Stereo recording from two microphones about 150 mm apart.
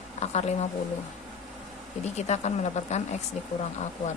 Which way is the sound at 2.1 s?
45° left (ahead or behind).